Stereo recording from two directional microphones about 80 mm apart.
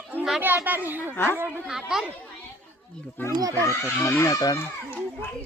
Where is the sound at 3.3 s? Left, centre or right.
Right.